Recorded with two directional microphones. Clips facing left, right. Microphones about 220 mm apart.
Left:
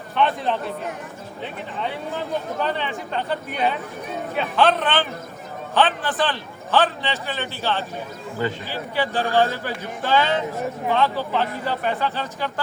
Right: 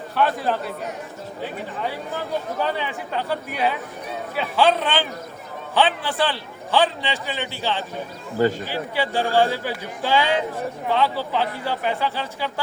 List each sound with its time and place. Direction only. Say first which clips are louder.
0.2 s a man's voice: even; 5° right (ahead or behind)
2.6 s a man's voice: even; 10° right (ahead or behind)
8.4 s speech: right 6 dB; 40° right (ahead or behind)
8.7 s a man's voice: right 1 dB; 15° right (ahead or behind)
11.3 s a man's voice: even; 10° right (ahead or behind)